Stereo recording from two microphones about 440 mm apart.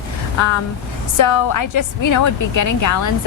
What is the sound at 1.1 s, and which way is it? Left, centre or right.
A woman's voice, left.